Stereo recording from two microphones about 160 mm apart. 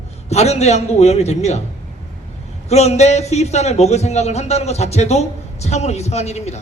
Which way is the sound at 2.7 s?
40° left (ahead or behind).